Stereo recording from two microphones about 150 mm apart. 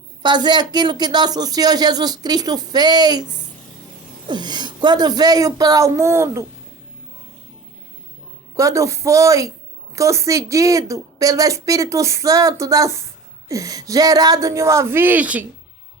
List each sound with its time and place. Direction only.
0.2 s a woman's voice: 30° right (ahead or behind)
4.3 s a woman's voice: 30° right (ahead or behind)
8.5 s a woman's voice: 20° right (ahead or behind)